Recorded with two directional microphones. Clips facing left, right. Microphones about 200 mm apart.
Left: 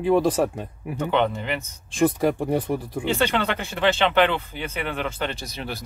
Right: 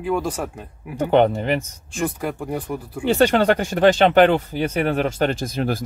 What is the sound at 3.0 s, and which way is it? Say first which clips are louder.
Speech: right 8 dB; 45° right (ahead or behind).